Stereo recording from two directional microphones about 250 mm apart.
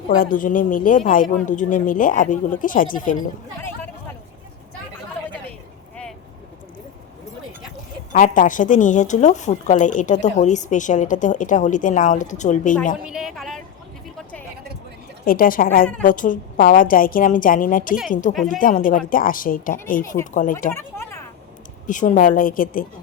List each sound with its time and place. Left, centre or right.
0.2 s speech: left
8.1 s speech: left
13.1 s a sound: centre
15.2 s speech: left
20.7 s a sound: centre
21.8 s speech: left